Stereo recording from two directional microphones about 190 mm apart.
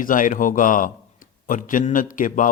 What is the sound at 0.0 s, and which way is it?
A man's voice, 45° left (ahead or behind).